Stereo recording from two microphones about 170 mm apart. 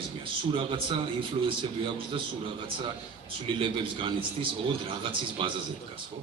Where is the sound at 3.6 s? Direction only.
30° right (ahead or behind).